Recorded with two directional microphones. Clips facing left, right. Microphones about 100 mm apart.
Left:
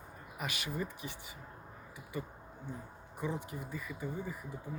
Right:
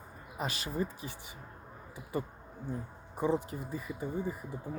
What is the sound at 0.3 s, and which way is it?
Speech, 30° right (ahead or behind).